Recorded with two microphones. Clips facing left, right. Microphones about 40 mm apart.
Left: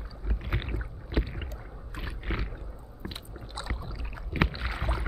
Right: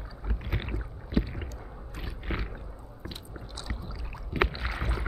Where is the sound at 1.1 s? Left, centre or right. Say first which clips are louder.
Right 3 dB; centre.